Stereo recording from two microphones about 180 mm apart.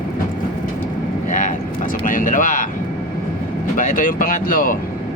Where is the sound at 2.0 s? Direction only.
50° left (ahead or behind).